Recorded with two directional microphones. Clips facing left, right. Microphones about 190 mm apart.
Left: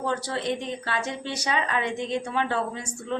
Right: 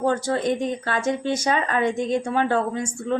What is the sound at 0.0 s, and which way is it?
Speech, 45° right (ahead or behind).